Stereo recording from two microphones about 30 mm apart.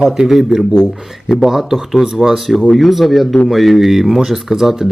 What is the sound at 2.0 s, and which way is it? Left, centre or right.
Speech, centre.